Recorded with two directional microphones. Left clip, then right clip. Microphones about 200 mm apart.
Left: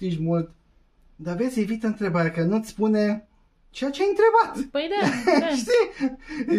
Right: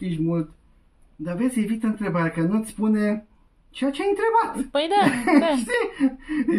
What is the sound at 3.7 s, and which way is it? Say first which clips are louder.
Speech: left 2 dB; 20° left (ahead or behind).